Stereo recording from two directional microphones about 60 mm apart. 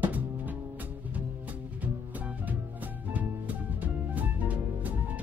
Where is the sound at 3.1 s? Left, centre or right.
Right.